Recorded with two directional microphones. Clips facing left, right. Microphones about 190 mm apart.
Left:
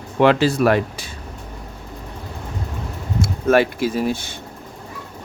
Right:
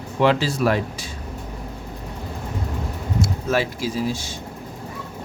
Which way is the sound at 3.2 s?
60° left (ahead or behind).